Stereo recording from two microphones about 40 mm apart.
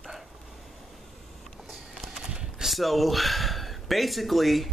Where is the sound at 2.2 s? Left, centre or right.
Right.